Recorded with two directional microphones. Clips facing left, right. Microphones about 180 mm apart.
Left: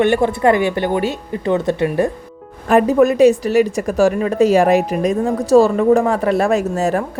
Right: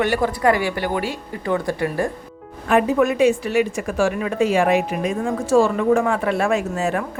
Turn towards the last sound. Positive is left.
turn(degrees=40)  # may be behind; listen again after turning